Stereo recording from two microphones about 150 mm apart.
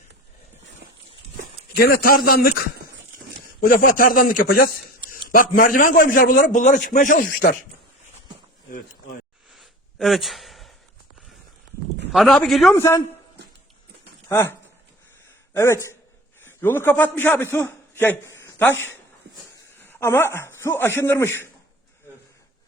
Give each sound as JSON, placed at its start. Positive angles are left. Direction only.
{"t": 1.7, "sound": "a man's voice", "side_deg": 85}
{"t": 3.6, "sound": "a man's voice", "side_deg": 70}
{"t": 9.5, "sound": "a sound", "side_deg": 0}
{"t": 12.1, "sound": "a man's voice", "side_deg": 0}
{"t": 12.7, "sound": "a man's voice", "side_deg": 15}
{"t": 14.3, "sound": "speech", "side_deg": 15}
{"t": 15.5, "sound": "a man's voice", "side_deg": 20}
{"t": 19.3, "sound": "a sound", "side_deg": -90}
{"t": 19.8, "sound": "a man's voice", "side_deg": 15}